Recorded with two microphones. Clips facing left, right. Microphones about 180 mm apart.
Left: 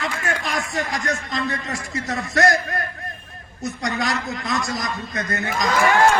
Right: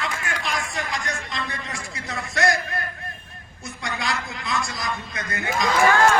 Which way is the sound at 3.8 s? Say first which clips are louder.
Left 4 dB; 45° left (ahead or behind).